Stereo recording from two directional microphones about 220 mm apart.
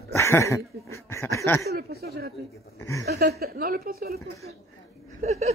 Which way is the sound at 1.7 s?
45° right (ahead or behind).